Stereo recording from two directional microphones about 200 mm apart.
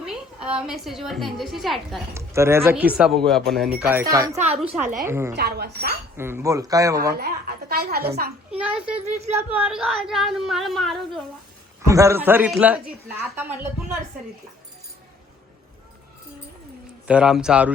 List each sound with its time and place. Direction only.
0.0 s a sound: 5° right (ahead or behind)
0.7 s speech: centre (ahead or behind)
2.1 s speech: 15° right (ahead or behind)
3.8 s speech: 15° right (ahead or behind)
5.4 s a woman's voice: 55° right (ahead or behind)
6.1 s speech: 10° right (ahead or behind)
7.1 s a woman's voice: 50° right (ahead or behind)
8.4 s speech: 5° right (ahead or behind)
11.9 s speech: 15° right (ahead or behind)
17.1 s speech: 5° right (ahead or behind)